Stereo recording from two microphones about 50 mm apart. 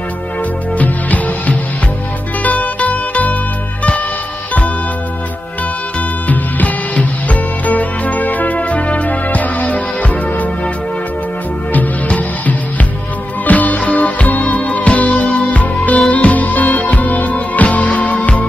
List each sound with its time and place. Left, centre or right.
0.7 s music: left
6.2 s music: left
11.7 s music: left